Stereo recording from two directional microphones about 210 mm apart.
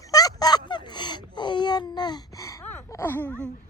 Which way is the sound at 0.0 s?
15° left (ahead or behind).